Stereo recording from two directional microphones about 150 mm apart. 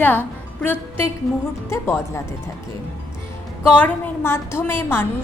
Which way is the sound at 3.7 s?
10° left (ahead or behind).